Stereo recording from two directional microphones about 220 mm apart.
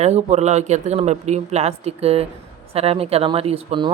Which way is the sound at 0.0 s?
30° right (ahead or behind).